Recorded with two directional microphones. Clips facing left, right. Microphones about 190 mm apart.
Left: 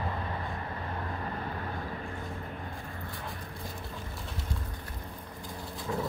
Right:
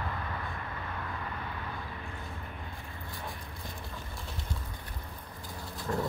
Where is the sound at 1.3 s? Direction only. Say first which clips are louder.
Left 4 dB; 40° left (ahead or behind).